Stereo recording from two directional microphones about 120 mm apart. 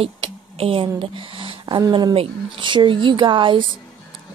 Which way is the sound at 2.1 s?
50° right (ahead or behind).